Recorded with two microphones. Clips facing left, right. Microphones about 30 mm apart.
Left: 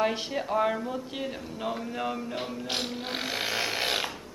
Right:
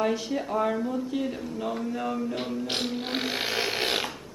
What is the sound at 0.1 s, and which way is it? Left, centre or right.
Speech, left.